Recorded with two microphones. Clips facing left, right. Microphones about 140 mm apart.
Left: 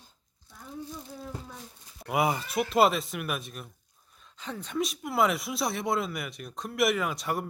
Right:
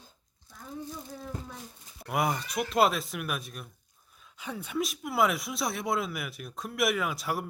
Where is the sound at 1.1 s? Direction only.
5° left (ahead or behind).